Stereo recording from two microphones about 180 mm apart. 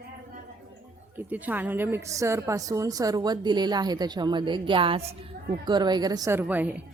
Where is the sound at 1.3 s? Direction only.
10° right (ahead or behind).